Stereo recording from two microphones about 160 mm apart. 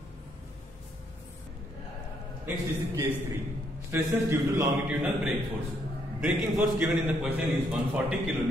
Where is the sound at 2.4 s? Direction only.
15° right (ahead or behind).